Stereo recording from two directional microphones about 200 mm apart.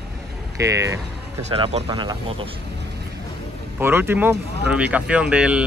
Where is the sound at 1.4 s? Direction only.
30° right (ahead or behind).